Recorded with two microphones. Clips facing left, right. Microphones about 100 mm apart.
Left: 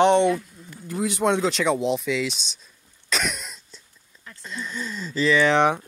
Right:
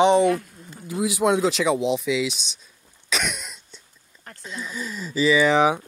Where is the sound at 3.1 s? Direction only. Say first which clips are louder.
Even; centre (ahead or behind).